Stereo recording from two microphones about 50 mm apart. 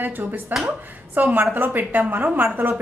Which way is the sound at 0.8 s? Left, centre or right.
Right.